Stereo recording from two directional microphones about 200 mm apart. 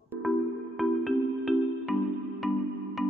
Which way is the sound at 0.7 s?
Centre (ahead or behind).